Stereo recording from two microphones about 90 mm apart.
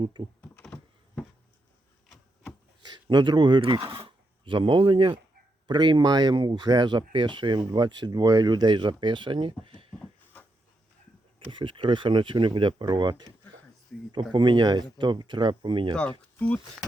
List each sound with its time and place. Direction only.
0.0 s speech: 65° right (ahead or behind)
0.6 s a sound: 10° left (ahead or behind)
2.8 s speech: 55° right (ahead or behind); by 3.8 s 80° right
3.9 s speech: 70° right (ahead or behind)
11.3 s speech: 65° right (ahead or behind)
16.4 s speech: 15° left (ahead or behind)